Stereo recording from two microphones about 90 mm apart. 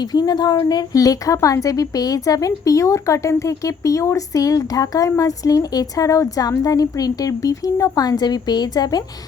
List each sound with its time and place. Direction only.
0.1 s a woman's voice: 50° left (ahead or behind)